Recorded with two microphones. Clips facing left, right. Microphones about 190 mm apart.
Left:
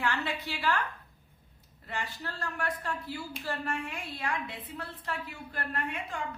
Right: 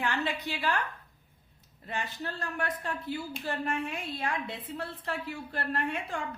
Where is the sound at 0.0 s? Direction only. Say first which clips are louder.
Right 1 dB; 20° right (ahead or behind).